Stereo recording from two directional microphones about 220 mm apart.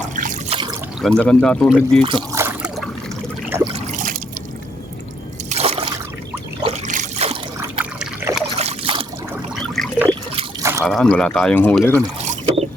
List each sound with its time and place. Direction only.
0.2 s trickle: 35° right (ahead or behind)
0.5 s a sound: 20° right (ahead or behind)
1.0 s speech: 5° left (ahead or behind)
2.0 s speech: 25° right (ahead or behind)
2.4 s trickle: 5° right (ahead or behind)
3.7 s trickle: 35° right (ahead or behind)
5.5 s trickle: 30° right (ahead or behind)
7.6 s water: 5° right (ahead or behind)
8.5 s trickle: 30° right (ahead or behind)
9.6 s trickle: centre (ahead or behind)
10.6 s drip: 15° right (ahead or behind)
10.8 s speech: 5° left (ahead or behind)
12.2 s boat: 30° right (ahead or behind)